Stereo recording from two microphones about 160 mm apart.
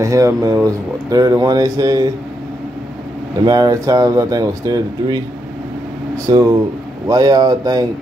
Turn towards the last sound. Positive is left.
turn(degrees=-25)  # may be behind; listen again after turning